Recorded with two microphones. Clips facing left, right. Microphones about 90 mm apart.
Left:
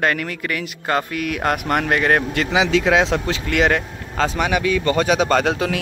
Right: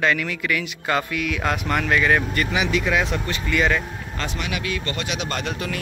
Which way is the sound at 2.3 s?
90° left.